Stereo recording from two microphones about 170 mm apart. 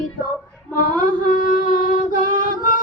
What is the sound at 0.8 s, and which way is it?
Mantra, 55° left (ahead or behind).